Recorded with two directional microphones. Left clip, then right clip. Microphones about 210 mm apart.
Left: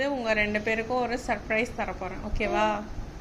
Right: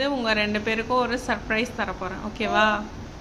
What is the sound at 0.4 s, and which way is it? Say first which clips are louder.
Speech: right 2 dB; 45° right (ahead or behind).